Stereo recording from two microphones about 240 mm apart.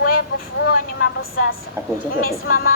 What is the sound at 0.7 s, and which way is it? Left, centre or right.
Speech, left.